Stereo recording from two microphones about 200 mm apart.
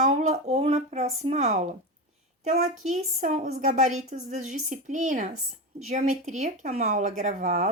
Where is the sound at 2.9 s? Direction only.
35° right (ahead or behind).